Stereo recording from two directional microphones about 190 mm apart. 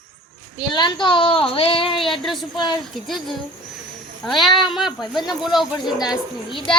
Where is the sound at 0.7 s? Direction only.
25° left (ahead or behind).